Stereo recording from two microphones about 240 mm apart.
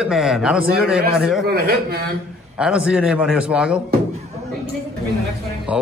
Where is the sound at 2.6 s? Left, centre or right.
Centre.